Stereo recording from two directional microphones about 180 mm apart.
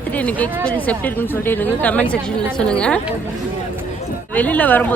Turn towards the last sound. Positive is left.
turn(degrees=10)  # may be behind; listen again after turning